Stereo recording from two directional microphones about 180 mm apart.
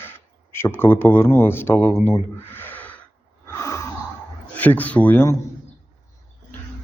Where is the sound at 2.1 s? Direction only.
10° left (ahead or behind).